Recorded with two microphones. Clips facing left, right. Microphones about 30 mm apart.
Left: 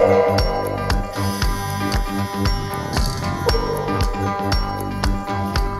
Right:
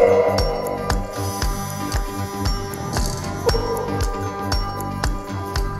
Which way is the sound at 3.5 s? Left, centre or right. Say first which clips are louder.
Even; left.